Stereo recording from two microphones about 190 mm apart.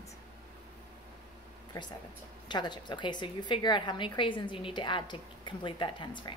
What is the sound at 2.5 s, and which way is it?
A woman's voice, 25° left (ahead or behind).